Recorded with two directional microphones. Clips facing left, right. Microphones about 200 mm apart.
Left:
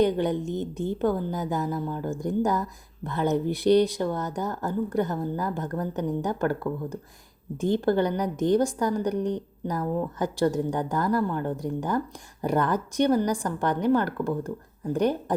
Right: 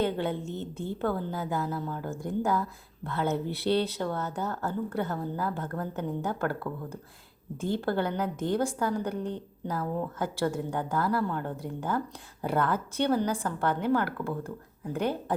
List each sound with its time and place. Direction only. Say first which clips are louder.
0.0 s a woman's voice: left 6 dB; 15° left (ahead or behind)